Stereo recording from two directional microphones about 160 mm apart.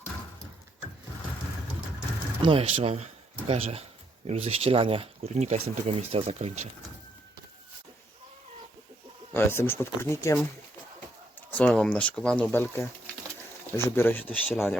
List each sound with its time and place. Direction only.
2.5 s speech: 35° right (ahead or behind)
9.3 s speech: 15° left (ahead or behind)
11.5 s speech: 5° left (ahead or behind)